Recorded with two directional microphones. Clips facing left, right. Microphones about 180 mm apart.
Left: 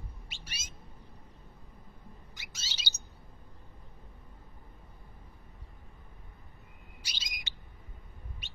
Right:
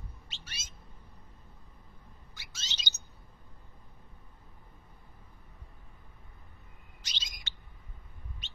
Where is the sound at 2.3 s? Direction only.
15° left (ahead or behind).